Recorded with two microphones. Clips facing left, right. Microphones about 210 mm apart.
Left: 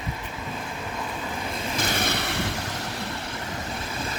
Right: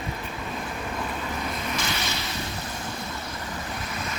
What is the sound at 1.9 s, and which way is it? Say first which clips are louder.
Vehicle: left 4 dB; 55° left (ahead or behind).